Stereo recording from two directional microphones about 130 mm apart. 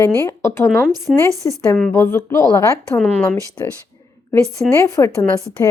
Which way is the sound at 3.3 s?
25° left (ahead or behind).